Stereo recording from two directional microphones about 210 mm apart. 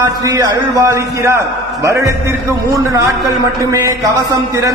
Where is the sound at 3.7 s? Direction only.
15° right (ahead or behind).